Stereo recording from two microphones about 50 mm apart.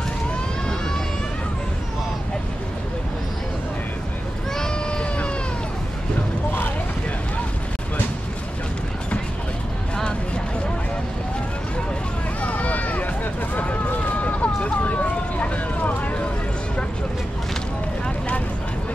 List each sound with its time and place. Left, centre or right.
4.6 s a sound: centre
12.4 s run: left
14.2 s vehicle: left